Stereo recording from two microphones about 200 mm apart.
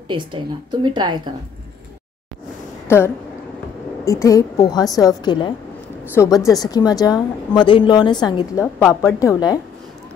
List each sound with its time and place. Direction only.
0.1 s a woman's voice: 25° right (ahead or behind)
4.0 s a woman's voice: 15° left (ahead or behind)